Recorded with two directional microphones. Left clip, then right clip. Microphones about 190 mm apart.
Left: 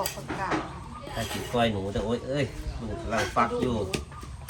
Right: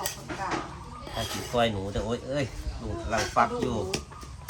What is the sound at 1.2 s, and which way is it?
A woman's voice, 5° right (ahead or behind).